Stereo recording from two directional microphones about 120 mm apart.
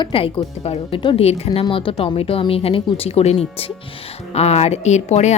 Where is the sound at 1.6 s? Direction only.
45° left (ahead or behind).